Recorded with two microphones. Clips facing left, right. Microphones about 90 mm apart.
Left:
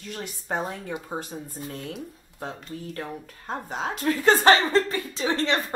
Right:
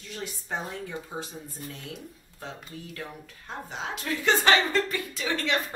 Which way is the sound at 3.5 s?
45° left (ahead or behind).